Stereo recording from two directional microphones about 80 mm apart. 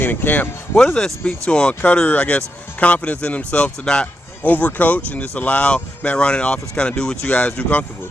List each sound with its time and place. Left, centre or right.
0.0 s speech: left
0.9 s speech: centre